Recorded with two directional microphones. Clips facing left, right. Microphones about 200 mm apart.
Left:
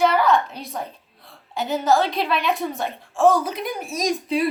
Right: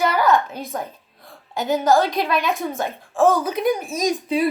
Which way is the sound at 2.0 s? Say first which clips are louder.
Right 1 dB; 45° right (ahead or behind).